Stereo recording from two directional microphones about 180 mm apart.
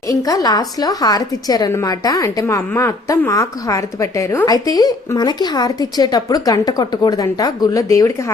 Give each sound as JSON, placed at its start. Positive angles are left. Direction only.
{"t": 0.1, "sound": "a woman's voice", "side_deg": 20}